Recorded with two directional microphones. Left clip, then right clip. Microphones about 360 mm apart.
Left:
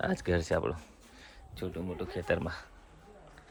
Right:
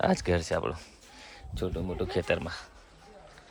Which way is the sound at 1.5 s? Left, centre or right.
Centre.